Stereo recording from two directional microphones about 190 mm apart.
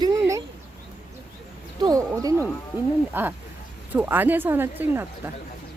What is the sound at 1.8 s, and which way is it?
Speech, 20° right (ahead or behind).